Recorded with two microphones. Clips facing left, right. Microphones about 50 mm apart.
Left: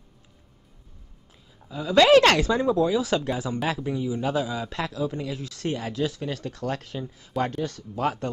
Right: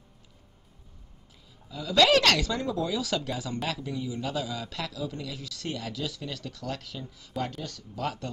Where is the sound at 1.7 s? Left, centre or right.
Left.